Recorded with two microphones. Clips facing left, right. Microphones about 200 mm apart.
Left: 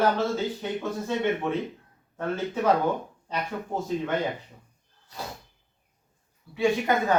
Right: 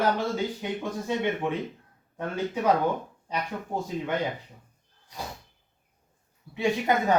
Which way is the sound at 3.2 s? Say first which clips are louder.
Left 1 dB; 15° right (ahead or behind).